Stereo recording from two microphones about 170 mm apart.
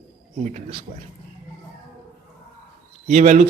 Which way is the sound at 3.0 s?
45° right (ahead or behind).